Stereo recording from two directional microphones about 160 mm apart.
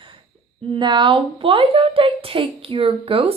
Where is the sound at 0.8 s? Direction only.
30° right (ahead or behind).